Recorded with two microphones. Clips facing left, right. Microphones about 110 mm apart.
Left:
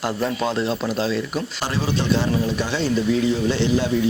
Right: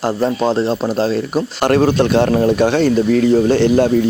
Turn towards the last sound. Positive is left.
turn(degrees=-55)  # may be behind; listen again after turning